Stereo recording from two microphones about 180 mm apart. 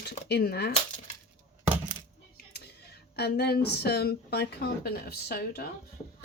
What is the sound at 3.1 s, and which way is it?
Speech, 65° left (ahead or behind).